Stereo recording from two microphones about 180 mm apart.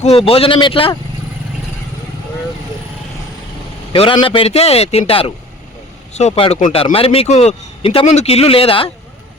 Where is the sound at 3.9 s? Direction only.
30° left (ahead or behind).